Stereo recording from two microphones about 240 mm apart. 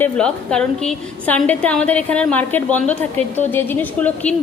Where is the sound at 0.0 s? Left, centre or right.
Centre.